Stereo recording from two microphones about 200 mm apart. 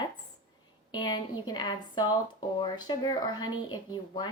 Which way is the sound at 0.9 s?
20° left (ahead or behind).